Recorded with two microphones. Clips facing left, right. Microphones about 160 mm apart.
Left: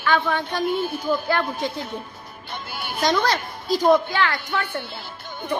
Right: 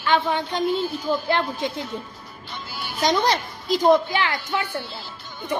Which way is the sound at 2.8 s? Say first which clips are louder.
Left 2 dB; 55° left (ahead or behind).